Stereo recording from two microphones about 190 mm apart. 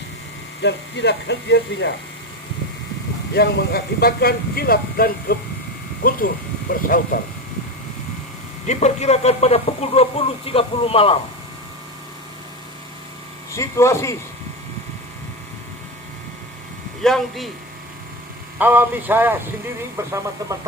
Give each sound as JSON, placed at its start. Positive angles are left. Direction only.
{"t": 0.6, "sound": "speech", "side_deg": 65}
{"t": 3.3, "sound": "speech", "side_deg": 55}
{"t": 8.6, "sound": "speech", "side_deg": 35}
{"t": 13.6, "sound": "speech", "side_deg": 15}
{"t": 17.0, "sound": "speech", "side_deg": 0}
{"t": 18.6, "sound": "speech", "side_deg": -10}